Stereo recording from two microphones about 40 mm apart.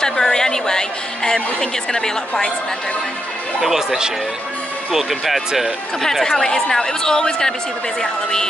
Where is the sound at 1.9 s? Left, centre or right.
Centre.